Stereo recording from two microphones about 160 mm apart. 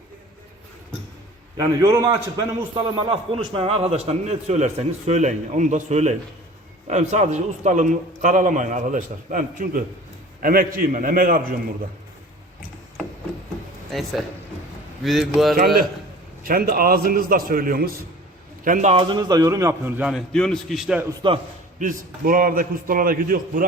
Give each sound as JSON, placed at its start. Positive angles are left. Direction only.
{"t": 1.5, "sound": "a man's voice", "side_deg": -20}
{"t": 13.9, "sound": "speech", "side_deg": 0}
{"t": 15.5, "sound": "a man's voice", "side_deg": -65}
{"t": 18.6, "sound": "a man's voice", "side_deg": -50}
{"t": 18.9, "sound": "a man's voice", "side_deg": -30}
{"t": 21.2, "sound": "a man's voice", "side_deg": -30}
{"t": 21.8, "sound": "a man's voice", "side_deg": -60}